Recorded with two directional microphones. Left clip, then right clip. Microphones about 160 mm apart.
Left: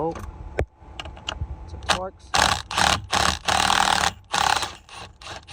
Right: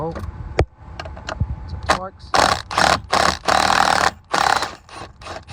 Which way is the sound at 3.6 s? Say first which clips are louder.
Right 3 dB; 20° left (ahead or behind).